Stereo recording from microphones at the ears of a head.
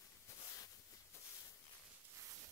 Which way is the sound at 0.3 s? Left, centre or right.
Left.